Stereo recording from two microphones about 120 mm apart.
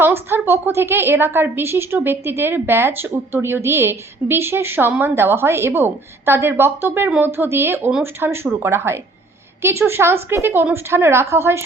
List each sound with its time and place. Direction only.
0.0 s a woman's voice: 20° right (ahead or behind)